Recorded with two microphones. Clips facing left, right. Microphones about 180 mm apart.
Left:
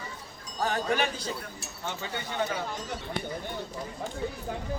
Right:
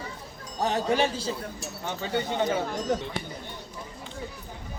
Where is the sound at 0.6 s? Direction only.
25° right (ahead or behind).